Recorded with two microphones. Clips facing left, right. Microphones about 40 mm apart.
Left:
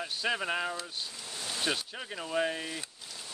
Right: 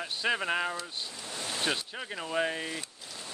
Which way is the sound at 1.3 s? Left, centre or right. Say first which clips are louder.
Right 4 dB; right.